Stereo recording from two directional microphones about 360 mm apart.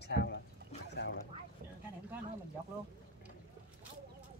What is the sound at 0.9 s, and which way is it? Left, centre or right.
Boat, left.